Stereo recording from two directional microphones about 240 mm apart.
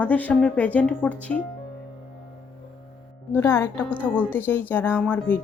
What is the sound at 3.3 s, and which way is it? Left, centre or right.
A woman's voice, centre.